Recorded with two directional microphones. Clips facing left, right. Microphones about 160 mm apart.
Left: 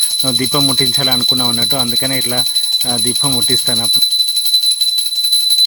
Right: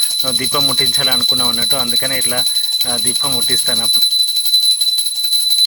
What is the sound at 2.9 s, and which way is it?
Speech, 30° left (ahead or behind).